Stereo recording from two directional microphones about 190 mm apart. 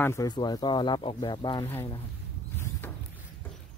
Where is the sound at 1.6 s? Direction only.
10° left (ahead or behind).